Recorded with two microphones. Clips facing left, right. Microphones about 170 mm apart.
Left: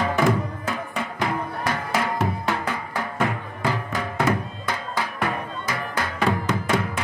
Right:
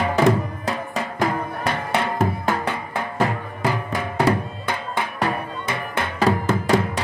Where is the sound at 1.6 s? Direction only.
25° right (ahead or behind).